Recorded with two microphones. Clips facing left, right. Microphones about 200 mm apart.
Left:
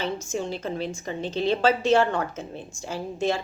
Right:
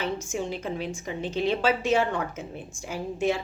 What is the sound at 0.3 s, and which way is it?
Speech, 10° right (ahead or behind).